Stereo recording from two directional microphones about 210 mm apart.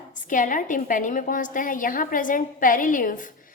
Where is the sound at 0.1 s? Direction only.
40° left (ahead or behind).